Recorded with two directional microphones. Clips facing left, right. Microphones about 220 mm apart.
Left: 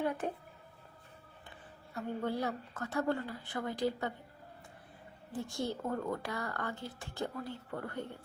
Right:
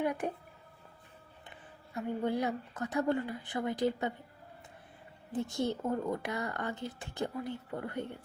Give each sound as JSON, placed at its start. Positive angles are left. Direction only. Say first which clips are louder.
{"t": 0.0, "sound": "a sound", "louder": "right 2 dB", "side_deg": -15}
{"t": 2.2, "sound": "a woman's voice", "louder": "right 3 dB", "side_deg": -15}
{"t": 5.3, "sound": "speech", "louder": "right 4 dB", "side_deg": -20}